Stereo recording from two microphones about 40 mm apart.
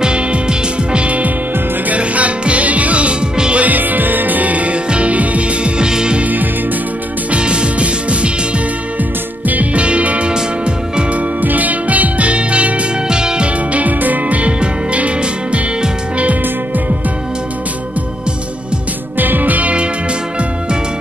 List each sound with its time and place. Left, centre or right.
0.0 s music: right
3.5 s music: right; by 6.1 s centre
6.2 s music: right
7.2 s music: right
9.8 s music: right
11.4 s music: right
13.1 s music: centre
13.7 s music: right
19.1 s music: right